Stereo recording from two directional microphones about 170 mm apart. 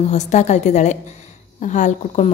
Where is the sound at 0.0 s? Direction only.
45° left (ahead or behind).